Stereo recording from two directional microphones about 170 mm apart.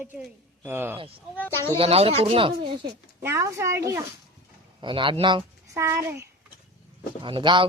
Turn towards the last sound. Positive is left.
turn(degrees=-30)  # may be behind; listen again after turning